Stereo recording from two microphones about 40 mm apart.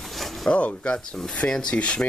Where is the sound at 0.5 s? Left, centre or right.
Left.